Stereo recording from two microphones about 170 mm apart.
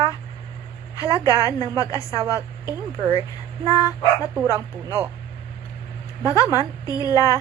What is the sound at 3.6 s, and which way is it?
Speech, 20° left (ahead or behind).